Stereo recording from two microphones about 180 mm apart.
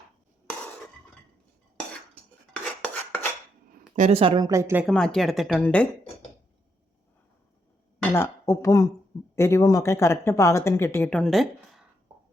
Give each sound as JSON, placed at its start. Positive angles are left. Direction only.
{"t": 2.8, "sound": "filing", "side_deg": 10}
{"t": 3.7, "sound": "a woman's voice", "side_deg": -40}
{"t": 4.9, "sound": "speech", "side_deg": 5}
{"t": 8.1, "sound": "speech", "side_deg": 15}